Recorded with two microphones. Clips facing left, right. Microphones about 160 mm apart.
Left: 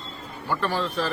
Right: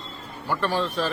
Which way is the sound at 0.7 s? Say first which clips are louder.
Right 2 dB; 15° right (ahead or behind).